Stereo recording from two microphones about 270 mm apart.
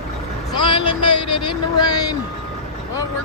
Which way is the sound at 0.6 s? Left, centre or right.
Centre.